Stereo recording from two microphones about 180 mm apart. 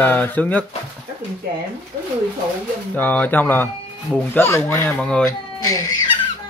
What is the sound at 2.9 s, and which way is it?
Speech, 10° left (ahead or behind).